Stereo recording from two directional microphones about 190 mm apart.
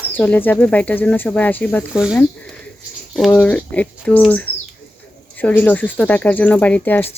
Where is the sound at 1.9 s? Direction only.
5° right (ahead or behind).